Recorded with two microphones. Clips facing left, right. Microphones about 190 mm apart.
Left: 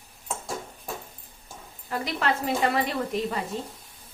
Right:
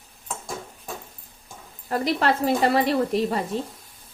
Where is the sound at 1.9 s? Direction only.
35° right (ahead or behind).